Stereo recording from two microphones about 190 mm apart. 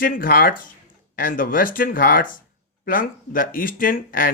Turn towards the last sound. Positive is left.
turn(degrees=50)  # may be behind; listen again after turning